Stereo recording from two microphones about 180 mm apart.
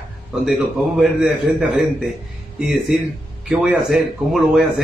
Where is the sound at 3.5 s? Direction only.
Centre (ahead or behind).